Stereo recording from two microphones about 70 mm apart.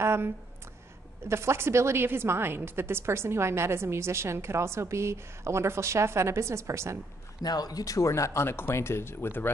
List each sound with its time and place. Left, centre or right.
0.0 s a sound: right
1.2 s a woman's voice: right
7.4 s speech: left